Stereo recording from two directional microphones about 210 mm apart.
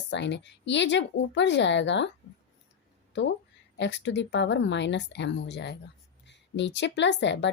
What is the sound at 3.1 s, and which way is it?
A woman's voice, 60° left (ahead or behind).